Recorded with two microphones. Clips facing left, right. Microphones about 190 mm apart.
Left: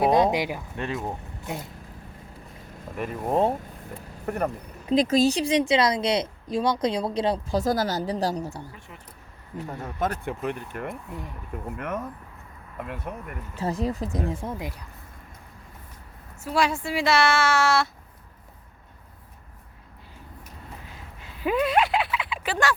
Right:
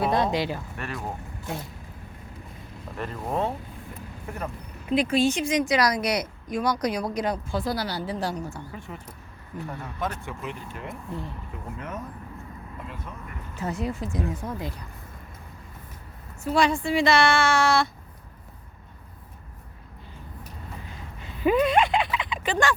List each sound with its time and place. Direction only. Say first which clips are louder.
0.0 s speech: left 3 dB; 15° left (ahead or behind)
2.9 s speech: left 3 dB; 10° left (ahead or behind)
4.9 s speech: left 2 dB; 40° left (ahead or behind)
7.6 s speech: left 4 dB; 45° left (ahead or behind)
9.8 s speech: left 6 dB; 45° left (ahead or behind); by 12.0 s 65° left (ahead or behind)
13.1 s speech: left 6 dB; 60° left (ahead or behind)
13.6 s speech: left 2 dB; 35° left (ahead or behind)
16.4 s a woman's voice: right 2 dB; 5° left (ahead or behind)
21.2 s a sound: right 3 dB; 5° left (ahead or behind)